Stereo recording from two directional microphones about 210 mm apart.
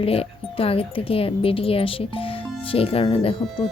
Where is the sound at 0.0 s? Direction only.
25° left (ahead or behind).